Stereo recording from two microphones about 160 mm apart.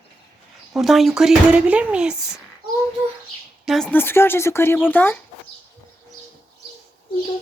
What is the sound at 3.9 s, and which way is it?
Speech, 15° left (ahead or behind).